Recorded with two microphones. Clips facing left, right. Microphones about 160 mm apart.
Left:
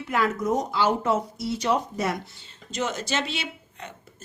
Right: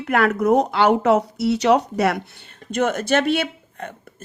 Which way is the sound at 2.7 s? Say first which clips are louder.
Right 9 dB; 55° right (ahead or behind).